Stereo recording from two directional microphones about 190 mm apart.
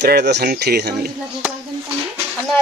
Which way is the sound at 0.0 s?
60° right (ahead or behind).